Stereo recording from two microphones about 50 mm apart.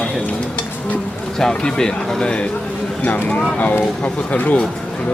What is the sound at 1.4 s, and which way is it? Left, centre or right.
A man's voice, centre.